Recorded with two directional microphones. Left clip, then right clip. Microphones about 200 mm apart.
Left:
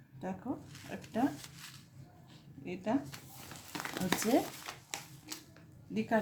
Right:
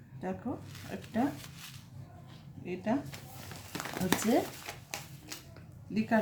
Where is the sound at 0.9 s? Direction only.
20° left (ahead or behind).